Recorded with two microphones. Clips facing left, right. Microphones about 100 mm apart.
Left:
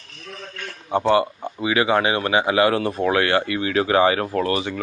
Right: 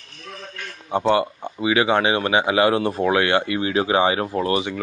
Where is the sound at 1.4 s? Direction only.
Centre (ahead or behind).